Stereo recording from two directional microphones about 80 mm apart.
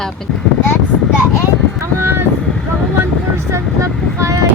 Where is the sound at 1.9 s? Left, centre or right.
Right.